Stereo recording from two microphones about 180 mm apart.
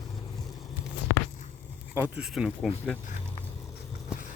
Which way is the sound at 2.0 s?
5° right (ahead or behind).